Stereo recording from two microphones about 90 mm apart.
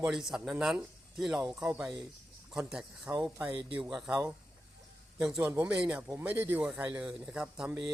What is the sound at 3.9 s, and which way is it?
Speech, 5° right (ahead or behind).